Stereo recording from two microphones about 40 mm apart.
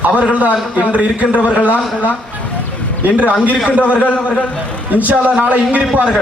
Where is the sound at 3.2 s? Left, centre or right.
Left.